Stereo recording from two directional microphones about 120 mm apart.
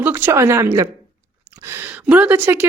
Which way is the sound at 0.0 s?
15° right (ahead or behind).